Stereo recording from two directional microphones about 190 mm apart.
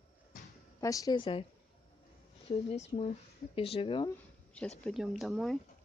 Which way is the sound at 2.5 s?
35° left (ahead or behind).